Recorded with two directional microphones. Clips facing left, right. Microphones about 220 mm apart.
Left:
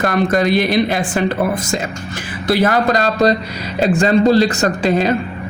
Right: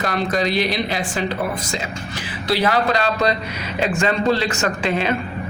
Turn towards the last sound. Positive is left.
turn(degrees=40)  # may be behind; listen again after turning